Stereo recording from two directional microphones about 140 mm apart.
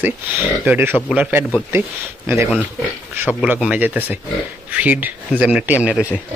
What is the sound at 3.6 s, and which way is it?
Speech, 15° right (ahead or behind).